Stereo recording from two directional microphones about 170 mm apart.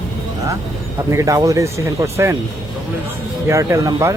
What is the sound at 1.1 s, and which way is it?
Speech, 20° right (ahead or behind).